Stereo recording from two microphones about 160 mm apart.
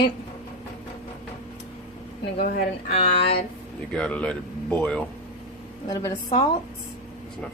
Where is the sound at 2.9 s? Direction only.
40° left (ahead or behind).